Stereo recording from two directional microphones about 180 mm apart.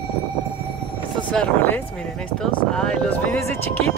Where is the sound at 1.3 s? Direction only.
10° left (ahead or behind).